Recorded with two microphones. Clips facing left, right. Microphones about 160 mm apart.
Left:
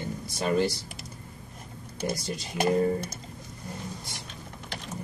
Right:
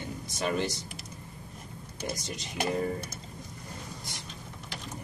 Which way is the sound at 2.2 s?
35° left (ahead or behind).